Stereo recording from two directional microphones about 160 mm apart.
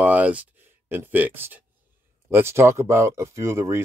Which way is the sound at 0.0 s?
10° right (ahead or behind).